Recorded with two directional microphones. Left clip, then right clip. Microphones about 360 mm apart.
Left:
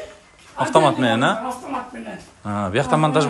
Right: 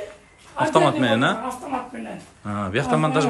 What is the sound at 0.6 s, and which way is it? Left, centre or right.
Speech, centre.